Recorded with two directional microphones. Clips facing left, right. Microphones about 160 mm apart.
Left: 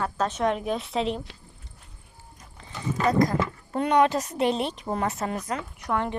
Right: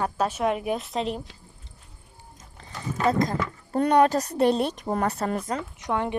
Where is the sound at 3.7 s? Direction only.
40° right (ahead or behind).